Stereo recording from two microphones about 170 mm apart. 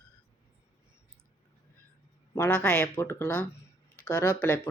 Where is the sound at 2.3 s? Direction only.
10° left (ahead or behind).